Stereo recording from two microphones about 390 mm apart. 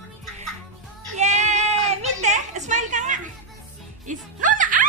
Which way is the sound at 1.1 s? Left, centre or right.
Centre.